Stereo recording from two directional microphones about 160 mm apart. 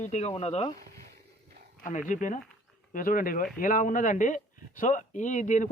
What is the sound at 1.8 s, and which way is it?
A man's voice, 50° left (ahead or behind).